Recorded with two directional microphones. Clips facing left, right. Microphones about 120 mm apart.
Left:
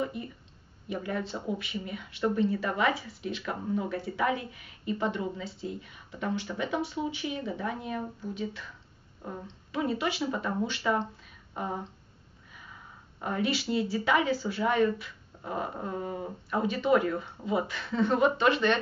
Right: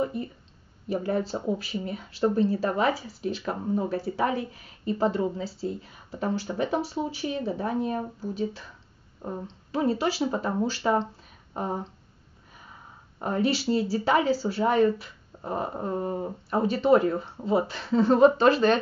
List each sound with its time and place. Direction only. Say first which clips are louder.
0.8 s speech: right 6 dB; 30° right (ahead or behind)
11.5 s a sound: right 4 dB; 30° right (ahead or behind)
13.2 s speech: right 4 dB; 35° right (ahead or behind)